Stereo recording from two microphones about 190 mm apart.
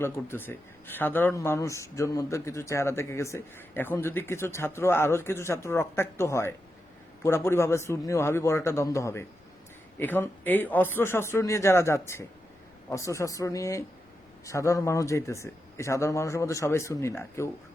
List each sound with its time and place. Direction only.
0.0 s speech: 10° left (ahead or behind)